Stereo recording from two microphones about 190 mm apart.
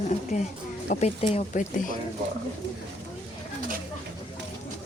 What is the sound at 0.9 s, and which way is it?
Speech, 35° left (ahead or behind).